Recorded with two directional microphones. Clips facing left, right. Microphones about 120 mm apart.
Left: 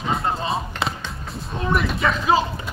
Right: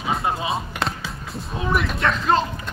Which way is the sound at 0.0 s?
5° right (ahead or behind).